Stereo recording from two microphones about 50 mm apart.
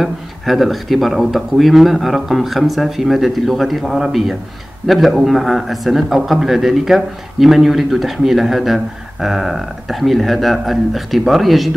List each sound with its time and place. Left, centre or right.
0.0 s speech: centre